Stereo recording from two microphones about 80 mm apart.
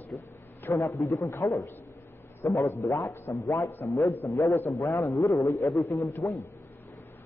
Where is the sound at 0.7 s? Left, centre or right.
Left.